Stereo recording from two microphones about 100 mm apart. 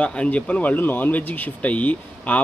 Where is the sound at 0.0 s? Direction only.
10° left (ahead or behind).